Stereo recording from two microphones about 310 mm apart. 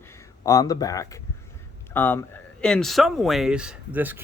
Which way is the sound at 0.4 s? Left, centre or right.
Centre.